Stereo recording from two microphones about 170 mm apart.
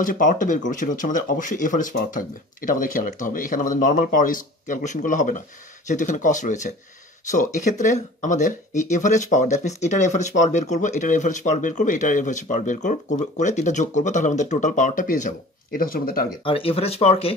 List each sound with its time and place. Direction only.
0.0 s speech: 50° left (ahead or behind)
16.4 s speech: 35° left (ahead or behind)